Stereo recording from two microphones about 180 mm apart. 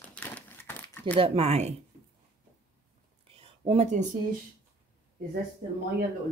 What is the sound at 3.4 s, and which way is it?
Speech, 35° right (ahead or behind).